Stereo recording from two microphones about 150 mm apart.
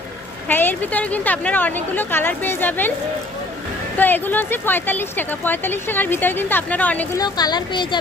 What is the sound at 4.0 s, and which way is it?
Speech, 10° left (ahead or behind).